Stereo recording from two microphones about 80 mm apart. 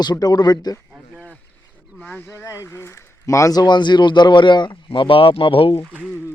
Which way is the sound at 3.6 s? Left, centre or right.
Left.